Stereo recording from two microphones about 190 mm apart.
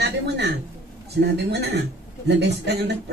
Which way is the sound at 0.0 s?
60° right (ahead or behind).